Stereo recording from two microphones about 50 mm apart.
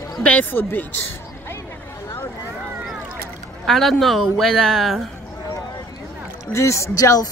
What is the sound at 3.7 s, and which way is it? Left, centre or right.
Speech, centre.